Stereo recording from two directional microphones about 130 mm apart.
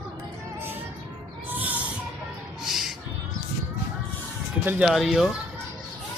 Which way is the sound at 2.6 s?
Centre (ahead or behind).